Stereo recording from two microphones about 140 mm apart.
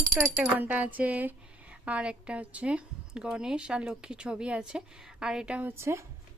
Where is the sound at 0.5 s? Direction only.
10° right (ahead or behind).